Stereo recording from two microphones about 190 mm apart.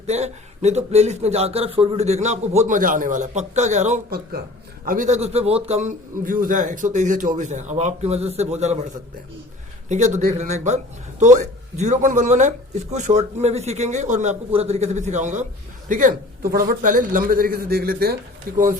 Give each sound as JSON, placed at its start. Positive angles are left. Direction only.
{"t": 0.0, "sound": "speech", "side_deg": -35}
{"t": 9.9, "sound": "a man's voice", "side_deg": -40}